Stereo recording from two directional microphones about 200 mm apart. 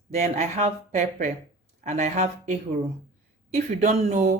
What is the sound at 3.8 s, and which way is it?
Speech, 35° right (ahead or behind).